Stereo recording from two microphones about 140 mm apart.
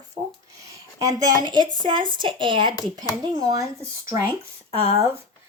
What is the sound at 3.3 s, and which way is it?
Speech, 25° right (ahead or behind).